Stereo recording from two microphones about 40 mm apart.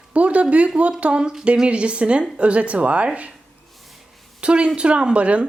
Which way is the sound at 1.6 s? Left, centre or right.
Right.